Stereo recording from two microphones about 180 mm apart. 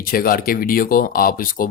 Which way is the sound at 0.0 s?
55° left (ahead or behind).